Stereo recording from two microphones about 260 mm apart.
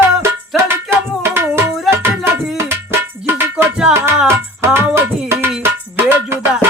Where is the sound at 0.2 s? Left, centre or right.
Centre.